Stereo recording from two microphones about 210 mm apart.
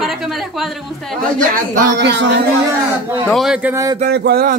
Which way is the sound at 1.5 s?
55° right (ahead or behind).